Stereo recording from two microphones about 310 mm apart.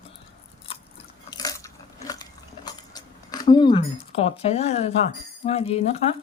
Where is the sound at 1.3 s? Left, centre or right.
Centre.